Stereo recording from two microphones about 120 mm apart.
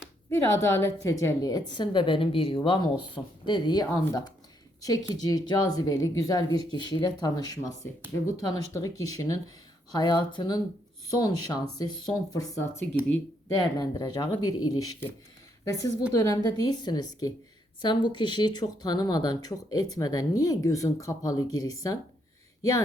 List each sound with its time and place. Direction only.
0.3 s a woman's voice: 20° left (ahead or behind)